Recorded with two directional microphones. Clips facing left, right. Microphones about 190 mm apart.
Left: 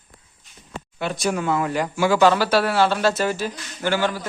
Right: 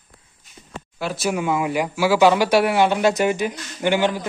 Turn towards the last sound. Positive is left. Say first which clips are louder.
# right 3 dB
turn(degrees=-15)  # may be behind; listen again after turning